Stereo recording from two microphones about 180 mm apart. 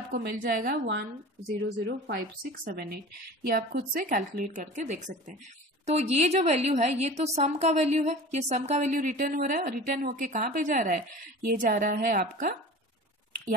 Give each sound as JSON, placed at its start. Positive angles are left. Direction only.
{"t": 0.1, "sound": "a woman's voice", "side_deg": -60}
{"t": 2.0, "sound": "a woman's voice", "side_deg": -55}